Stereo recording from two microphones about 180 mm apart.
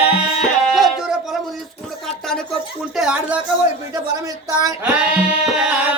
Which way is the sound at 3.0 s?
5° right (ahead or behind).